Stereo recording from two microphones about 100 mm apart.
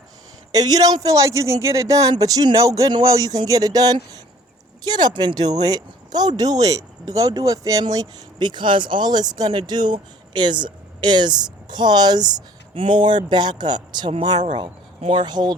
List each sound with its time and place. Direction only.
0.5 s a man's voice: 40° right (ahead or behind)
12.7 s speech: 60° right (ahead or behind)
15.0 s speech: 65° right (ahead or behind)
15.3 s speech: 45° right (ahead or behind)